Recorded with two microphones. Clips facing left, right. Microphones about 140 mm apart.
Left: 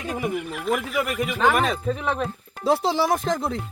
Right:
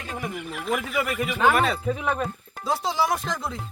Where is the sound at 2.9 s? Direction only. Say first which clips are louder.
Left 3 dB; 50° left (ahead or behind).